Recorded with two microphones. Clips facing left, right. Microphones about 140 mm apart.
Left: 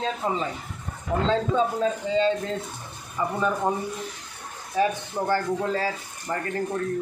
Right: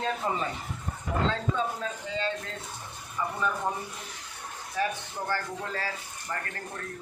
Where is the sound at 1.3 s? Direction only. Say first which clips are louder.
Left 7 dB; 25° left (ahead or behind).